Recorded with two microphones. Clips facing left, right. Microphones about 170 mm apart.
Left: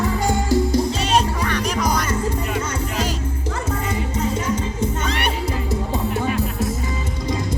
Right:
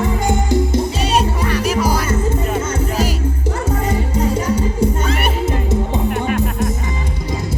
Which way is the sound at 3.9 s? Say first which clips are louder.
Right 5 dB; 30° right (ahead or behind).